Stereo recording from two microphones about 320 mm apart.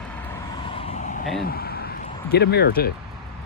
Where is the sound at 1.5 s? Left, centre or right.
Left.